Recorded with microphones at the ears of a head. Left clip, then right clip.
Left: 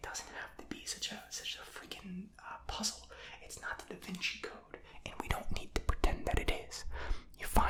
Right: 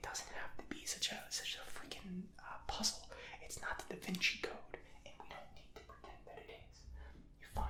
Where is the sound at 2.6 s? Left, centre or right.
Centre.